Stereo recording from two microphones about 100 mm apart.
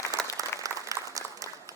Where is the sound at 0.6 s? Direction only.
35° right (ahead or behind).